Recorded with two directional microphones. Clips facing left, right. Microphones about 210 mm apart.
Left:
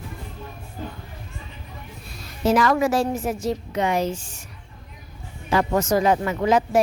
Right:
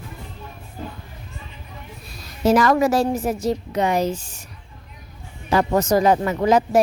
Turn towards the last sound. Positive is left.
turn(degrees=-40)  # may be behind; listen again after turning